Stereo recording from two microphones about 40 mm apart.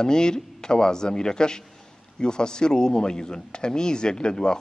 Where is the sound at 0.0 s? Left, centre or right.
Centre.